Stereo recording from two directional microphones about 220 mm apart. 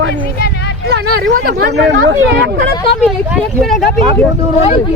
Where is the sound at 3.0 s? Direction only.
5° right (ahead or behind).